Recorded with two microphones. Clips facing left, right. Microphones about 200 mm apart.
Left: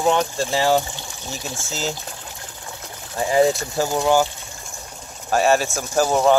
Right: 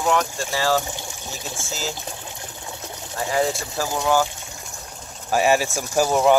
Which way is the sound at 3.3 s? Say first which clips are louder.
Left 6 dB; 20° left (ahead or behind).